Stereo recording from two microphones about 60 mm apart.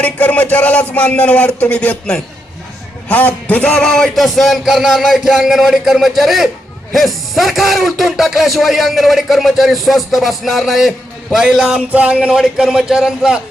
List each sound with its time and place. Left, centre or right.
0.0 s a man's voice: left
4.1 s speech: centre
11.4 s a man's voice: centre
11.9 s music: right
12.4 s a man's voice: centre